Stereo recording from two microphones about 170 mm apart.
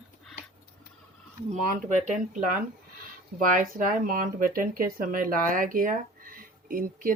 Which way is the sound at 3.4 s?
50° right (ahead or behind).